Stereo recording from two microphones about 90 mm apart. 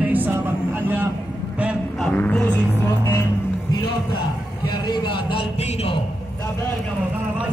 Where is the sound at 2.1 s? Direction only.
15° left (ahead or behind).